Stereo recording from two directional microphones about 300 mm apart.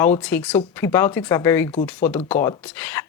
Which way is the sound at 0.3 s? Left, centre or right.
Centre.